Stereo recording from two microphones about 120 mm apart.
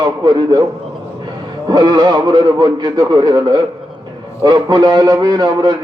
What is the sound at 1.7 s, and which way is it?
A man's voice, 35° right (ahead or behind).